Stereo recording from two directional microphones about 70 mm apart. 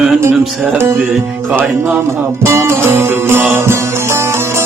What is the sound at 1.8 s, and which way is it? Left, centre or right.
Music, right.